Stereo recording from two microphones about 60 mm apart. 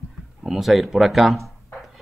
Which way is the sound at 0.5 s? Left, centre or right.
Centre.